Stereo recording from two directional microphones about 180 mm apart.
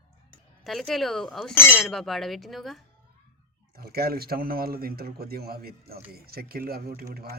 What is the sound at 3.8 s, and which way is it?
Speech, 60° right (ahead or behind).